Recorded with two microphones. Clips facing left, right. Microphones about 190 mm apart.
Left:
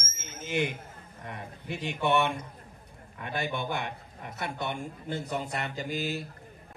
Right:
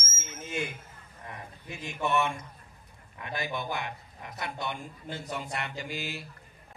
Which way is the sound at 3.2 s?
55° left (ahead or behind).